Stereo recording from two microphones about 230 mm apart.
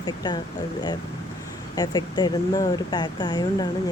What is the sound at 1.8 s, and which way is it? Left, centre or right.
Speech, centre.